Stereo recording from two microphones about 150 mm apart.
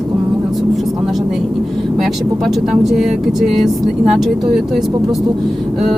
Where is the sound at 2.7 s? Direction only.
Centre (ahead or behind).